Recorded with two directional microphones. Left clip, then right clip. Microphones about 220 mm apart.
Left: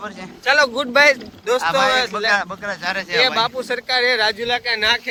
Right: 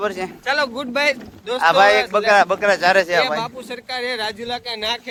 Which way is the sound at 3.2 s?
Centre (ahead or behind).